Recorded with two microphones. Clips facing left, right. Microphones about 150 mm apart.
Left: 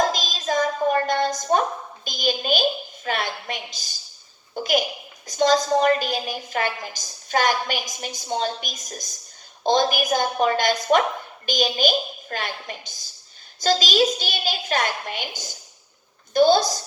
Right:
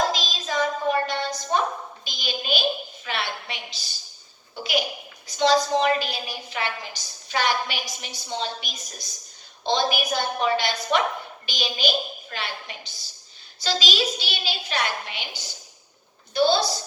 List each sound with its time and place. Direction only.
0.1 s hands: 45° left (ahead or behind)
2.0 s a woman's voice: 45° left (ahead or behind)